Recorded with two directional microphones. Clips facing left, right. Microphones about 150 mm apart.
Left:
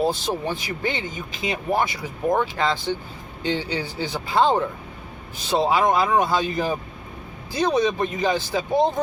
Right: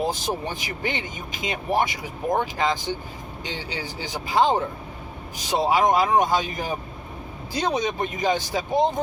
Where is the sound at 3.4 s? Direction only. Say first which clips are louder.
Left 8 dB; 15° right (ahead or behind).